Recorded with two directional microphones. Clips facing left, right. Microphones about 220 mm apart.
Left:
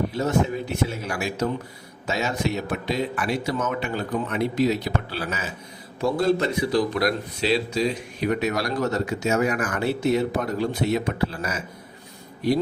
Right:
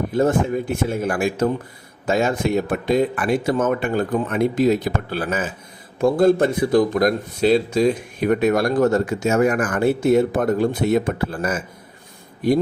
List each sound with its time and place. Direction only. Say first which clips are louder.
0.1 s speech: right 5 dB; 50° right (ahead or behind)